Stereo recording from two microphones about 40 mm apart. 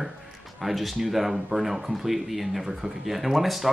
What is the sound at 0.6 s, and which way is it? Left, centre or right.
Speech, centre.